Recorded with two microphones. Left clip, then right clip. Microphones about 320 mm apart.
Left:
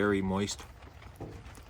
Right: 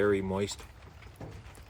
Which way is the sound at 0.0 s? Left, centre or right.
Centre.